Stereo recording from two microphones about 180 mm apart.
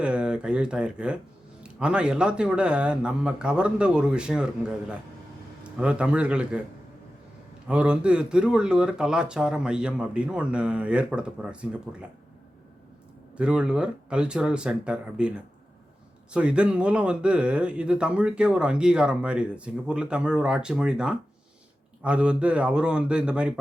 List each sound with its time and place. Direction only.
0.0 s a man's voice: 5° right (ahead or behind)
7.7 s speech: 5° right (ahead or behind)
13.3 s speech: 5° right (ahead or behind)